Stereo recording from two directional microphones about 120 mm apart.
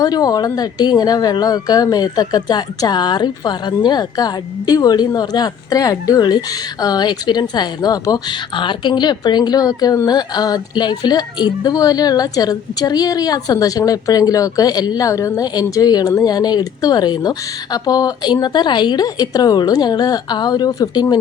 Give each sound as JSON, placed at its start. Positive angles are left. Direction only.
{"t": 0.0, "sound": "a woman's voice", "side_deg": 35}